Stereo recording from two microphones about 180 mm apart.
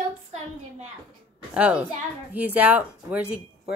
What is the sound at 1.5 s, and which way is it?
A woman's voice, 5° right (ahead or behind).